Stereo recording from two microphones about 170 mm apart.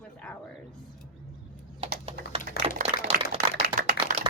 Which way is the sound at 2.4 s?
50° left (ahead or behind).